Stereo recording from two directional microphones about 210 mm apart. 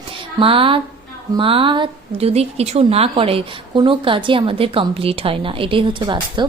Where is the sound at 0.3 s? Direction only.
25° right (ahead or behind).